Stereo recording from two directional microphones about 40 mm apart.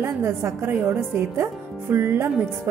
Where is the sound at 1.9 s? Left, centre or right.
Right.